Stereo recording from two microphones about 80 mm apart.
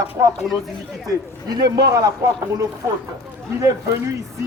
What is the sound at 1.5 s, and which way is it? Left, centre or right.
Speech, right.